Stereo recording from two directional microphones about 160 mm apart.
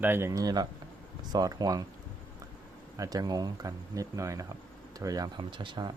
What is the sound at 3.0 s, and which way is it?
Speech, 25° right (ahead or behind).